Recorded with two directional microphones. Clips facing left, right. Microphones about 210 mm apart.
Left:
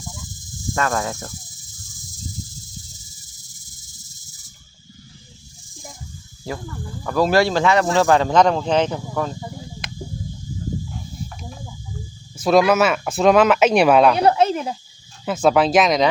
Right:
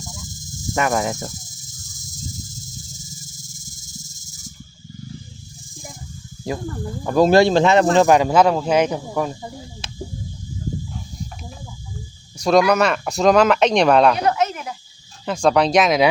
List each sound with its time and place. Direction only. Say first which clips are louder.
0.8 s speech: right 3 dB; 15° right (ahead or behind)
7.0 s speech: right 4 dB; 25° right (ahead or behind)
12.4 s speech: even; 5° left (ahead or behind)
14.2 s a sound: left 4 dB; 30° left (ahead or behind)
15.2 s speech: even; 5° left (ahead or behind)